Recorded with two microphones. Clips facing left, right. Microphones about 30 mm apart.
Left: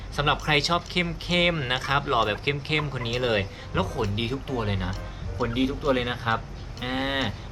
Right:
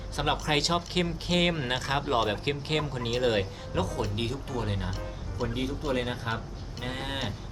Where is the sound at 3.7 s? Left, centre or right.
Left.